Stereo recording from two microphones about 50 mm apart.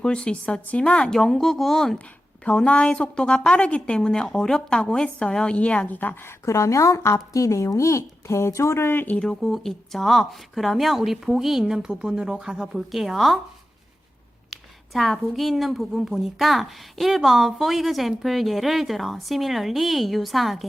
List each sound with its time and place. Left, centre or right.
0.0 s a woman's voice: centre
1.2 s speech: centre
2.4 s a woman's voice: left
5.9 s a woman's voice: left
6.2 s a woman's voice: left
9.4 s a woman's voice: centre
14.5 s a woman's voice: centre